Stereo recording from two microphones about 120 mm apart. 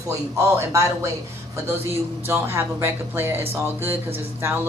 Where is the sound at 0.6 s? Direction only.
25° right (ahead or behind).